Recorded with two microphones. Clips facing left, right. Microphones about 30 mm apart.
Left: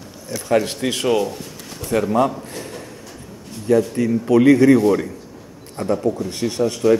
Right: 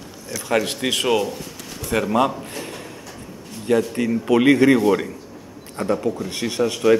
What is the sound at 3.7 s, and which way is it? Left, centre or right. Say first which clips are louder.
Speech: left 2 dB; right.